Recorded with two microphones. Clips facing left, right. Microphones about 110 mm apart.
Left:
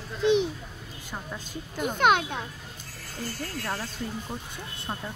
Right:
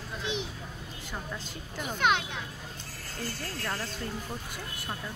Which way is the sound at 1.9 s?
50° left (ahead or behind).